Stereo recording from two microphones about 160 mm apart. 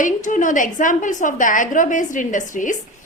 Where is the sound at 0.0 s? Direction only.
50° left (ahead or behind).